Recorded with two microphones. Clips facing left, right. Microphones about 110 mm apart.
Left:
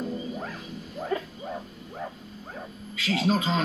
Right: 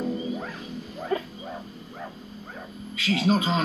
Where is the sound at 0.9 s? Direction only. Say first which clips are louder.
Right 1 dB; centre (ahead or behind).